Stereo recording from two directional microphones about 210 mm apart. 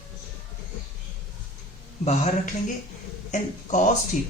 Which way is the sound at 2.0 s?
30° left (ahead or behind).